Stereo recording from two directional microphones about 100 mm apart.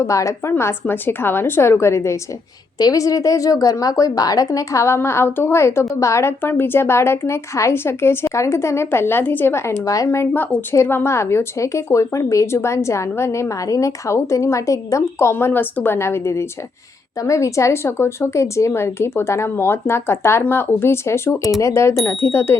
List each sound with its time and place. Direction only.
0.0 s a woman's voice: 30° left (ahead or behind)